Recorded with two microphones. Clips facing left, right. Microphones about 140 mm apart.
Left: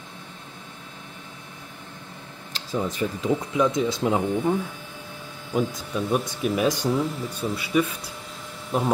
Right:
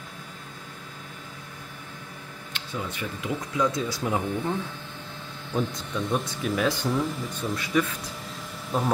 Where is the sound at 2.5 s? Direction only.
35° left (ahead or behind).